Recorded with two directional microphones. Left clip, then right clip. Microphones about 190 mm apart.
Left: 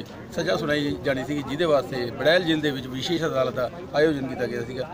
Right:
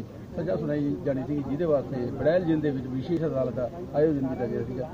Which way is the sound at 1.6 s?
30° left (ahead or behind).